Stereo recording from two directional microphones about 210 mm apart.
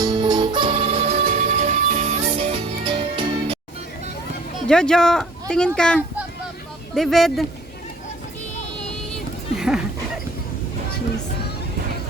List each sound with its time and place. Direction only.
0.0 s music: 20° right (ahead or behind)
4.6 s speech: 5° left (ahead or behind)
9.1 s a sound: centre (ahead or behind)